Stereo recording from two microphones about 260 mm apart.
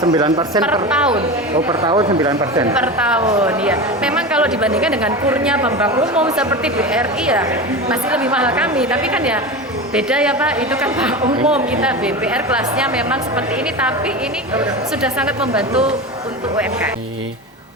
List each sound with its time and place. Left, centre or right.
0.0 s speech: centre
0.6 s a woman's voice: centre
1.1 s speech: centre
2.7 s a woman's voice: centre
15.0 s a woman's voice: centre